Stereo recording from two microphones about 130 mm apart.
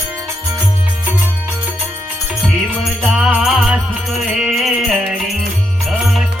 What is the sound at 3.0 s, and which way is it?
Music, 5° right (ahead or behind).